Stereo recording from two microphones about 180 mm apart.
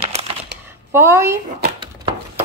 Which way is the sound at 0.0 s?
35° right (ahead or behind).